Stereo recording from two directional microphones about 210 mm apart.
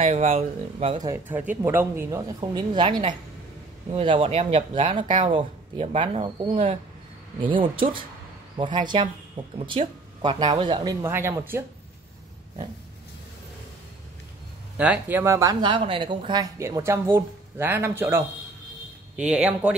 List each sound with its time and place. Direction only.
0.0 s speech: 30° right (ahead or behind)
1.0 s speech: 10° right (ahead or behind)
14.8 s speech: 10° right (ahead or behind)